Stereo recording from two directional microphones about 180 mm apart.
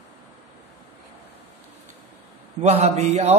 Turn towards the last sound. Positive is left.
turn(degrees=-35)  # may be behind; listen again after turning